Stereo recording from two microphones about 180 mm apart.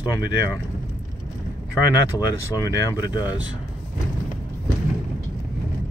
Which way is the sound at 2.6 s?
20° left (ahead or behind).